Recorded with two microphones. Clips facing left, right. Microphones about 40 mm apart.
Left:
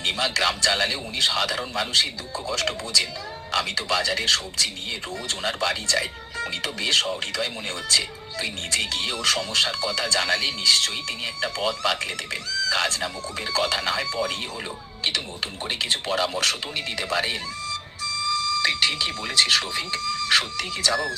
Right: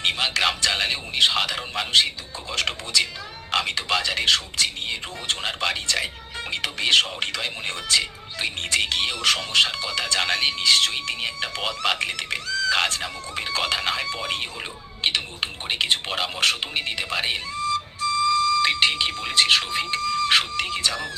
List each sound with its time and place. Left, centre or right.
0.0 s speech: right